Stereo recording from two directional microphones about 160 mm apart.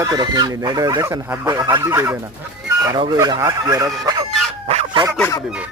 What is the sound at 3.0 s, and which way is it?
Speech, 25° right (ahead or behind).